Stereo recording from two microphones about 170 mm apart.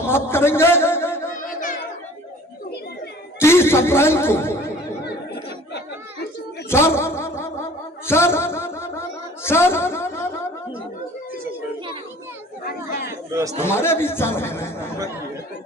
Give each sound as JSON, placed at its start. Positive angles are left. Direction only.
{"t": 0.0, "sound": "a sound", "side_deg": 15}
{"t": 3.3, "sound": "a man's voice", "side_deg": 15}
{"t": 5.0, "sound": "chatter", "side_deg": 75}
{"t": 6.7, "sound": "a sound", "side_deg": 15}
{"t": 13.1, "sound": "chatter", "side_deg": -15}
{"t": 13.6, "sound": "speech", "side_deg": 15}